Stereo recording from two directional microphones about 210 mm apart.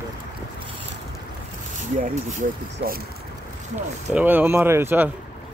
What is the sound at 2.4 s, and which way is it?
Speech, 40° right (ahead or behind).